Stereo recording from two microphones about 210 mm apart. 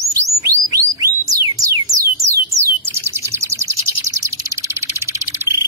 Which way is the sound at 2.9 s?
10° right (ahead or behind).